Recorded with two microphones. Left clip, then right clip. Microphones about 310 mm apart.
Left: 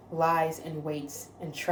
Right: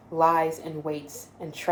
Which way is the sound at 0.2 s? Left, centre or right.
Right.